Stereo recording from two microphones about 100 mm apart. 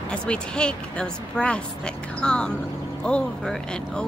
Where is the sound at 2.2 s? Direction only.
10° left (ahead or behind).